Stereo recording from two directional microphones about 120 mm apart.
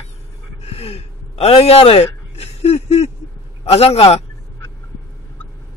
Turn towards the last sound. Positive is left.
turn(degrees=60)  # may be behind; listen again after turning